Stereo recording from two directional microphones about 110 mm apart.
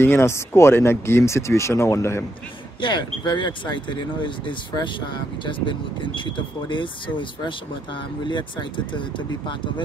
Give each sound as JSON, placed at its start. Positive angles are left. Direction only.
{"t": 0.0, "sound": "speech", "side_deg": 20}
{"t": 2.8, "sound": "speech", "side_deg": 45}